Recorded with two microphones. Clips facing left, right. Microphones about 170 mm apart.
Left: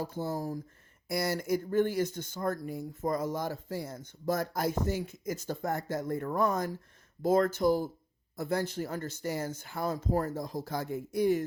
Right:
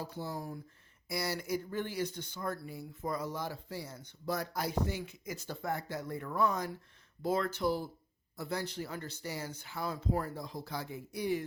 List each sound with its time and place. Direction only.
0.0 s speech: 50° left (ahead or behind)